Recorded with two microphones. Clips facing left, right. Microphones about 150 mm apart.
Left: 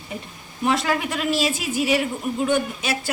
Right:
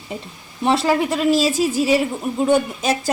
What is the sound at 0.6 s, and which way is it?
A woman's voice, 30° right (ahead or behind).